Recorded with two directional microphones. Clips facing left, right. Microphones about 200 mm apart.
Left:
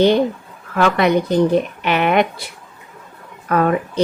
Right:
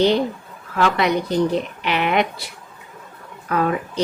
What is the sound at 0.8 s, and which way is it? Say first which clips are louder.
A woman's voice: left 4 dB; 55° left (ahead or behind).